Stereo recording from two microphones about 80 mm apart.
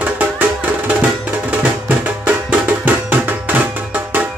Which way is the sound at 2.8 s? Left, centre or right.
Right.